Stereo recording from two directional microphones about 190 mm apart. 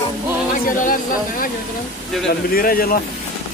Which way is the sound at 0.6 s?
45° left (ahead or behind).